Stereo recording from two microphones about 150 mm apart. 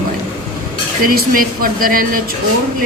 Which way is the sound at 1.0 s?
70° right (ahead or behind).